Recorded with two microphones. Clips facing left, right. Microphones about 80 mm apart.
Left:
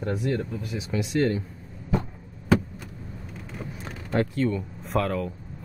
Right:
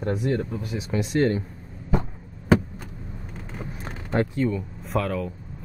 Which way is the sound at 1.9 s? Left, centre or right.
Right.